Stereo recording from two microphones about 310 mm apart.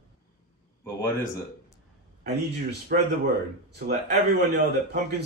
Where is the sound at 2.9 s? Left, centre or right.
Right.